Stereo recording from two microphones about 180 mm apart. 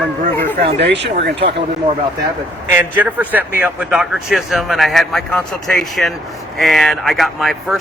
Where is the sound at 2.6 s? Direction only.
10° right (ahead or behind).